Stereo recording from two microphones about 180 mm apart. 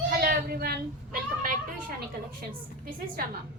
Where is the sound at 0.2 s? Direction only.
55° right (ahead or behind).